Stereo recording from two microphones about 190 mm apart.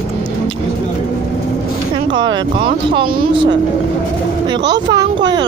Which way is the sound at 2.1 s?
25° right (ahead or behind).